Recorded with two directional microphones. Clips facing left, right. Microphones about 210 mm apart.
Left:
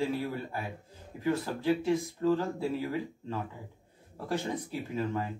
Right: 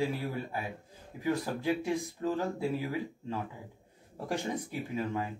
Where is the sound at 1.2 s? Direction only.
15° right (ahead or behind).